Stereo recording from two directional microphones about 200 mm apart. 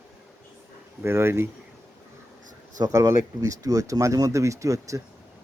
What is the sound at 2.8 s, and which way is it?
Speech, 15° right (ahead or behind).